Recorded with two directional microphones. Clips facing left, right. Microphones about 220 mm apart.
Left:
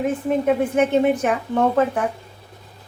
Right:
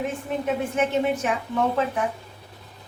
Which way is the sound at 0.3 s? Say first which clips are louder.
Left 8 dB; 50° left (ahead or behind).